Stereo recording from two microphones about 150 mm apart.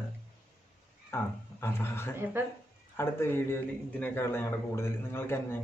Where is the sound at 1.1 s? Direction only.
15° left (ahead or behind).